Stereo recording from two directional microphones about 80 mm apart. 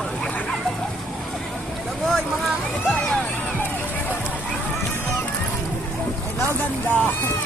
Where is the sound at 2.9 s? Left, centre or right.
Centre.